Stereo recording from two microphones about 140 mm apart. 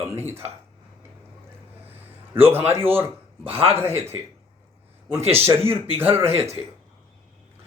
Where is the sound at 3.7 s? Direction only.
15° right (ahead or behind).